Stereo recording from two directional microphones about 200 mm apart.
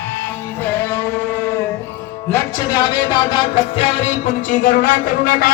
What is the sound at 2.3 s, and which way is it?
Music, 20° left (ahead or behind).